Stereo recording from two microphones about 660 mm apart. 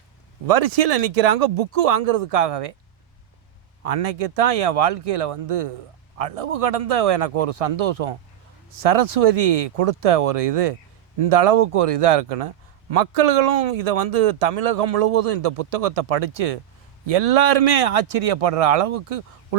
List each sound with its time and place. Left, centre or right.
0.4 s a man's voice: right
3.8 s a man's voice: right